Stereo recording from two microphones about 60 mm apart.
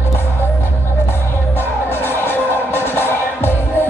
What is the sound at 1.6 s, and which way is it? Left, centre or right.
Music, left.